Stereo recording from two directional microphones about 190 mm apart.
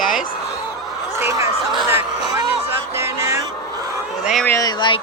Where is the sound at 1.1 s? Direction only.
15° right (ahead or behind).